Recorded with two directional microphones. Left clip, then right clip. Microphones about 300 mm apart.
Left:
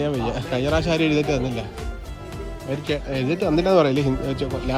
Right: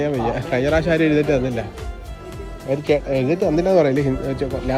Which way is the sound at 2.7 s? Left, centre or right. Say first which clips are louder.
Right 8 dB; centre.